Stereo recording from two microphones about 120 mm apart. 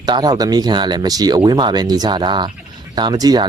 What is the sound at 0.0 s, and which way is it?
Speech, 35° right (ahead or behind).